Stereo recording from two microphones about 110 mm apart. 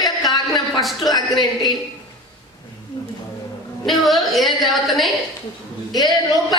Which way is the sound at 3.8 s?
Centre (ahead or behind).